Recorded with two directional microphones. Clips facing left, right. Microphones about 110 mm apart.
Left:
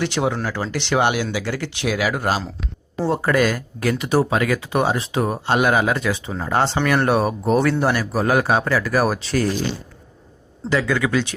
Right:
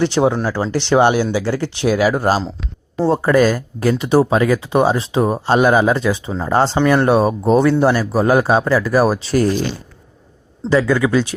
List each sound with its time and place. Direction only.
0.0 s speech: 30° right (ahead or behind)
6.7 s speech: 25° right (ahead or behind)
10.7 s speech: 35° right (ahead or behind)